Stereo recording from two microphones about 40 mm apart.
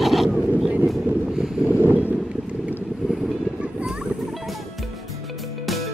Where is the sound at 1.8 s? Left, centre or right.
Right.